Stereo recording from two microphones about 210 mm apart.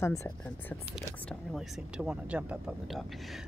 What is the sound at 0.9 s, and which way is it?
Speech, centre (ahead or behind).